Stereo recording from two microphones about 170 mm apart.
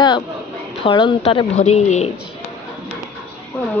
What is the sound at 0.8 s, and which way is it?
A woman's voice, 30° left (ahead or behind).